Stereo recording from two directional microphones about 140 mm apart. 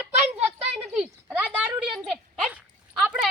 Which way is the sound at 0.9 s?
10° right (ahead or behind).